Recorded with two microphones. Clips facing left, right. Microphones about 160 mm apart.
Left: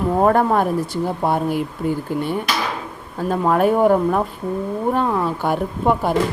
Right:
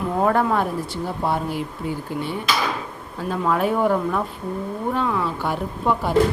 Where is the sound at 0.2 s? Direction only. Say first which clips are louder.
Left 3 dB; 45° left (ahead or behind).